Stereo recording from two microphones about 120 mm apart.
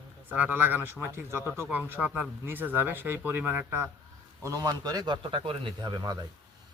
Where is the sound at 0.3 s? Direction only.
15° right (ahead or behind).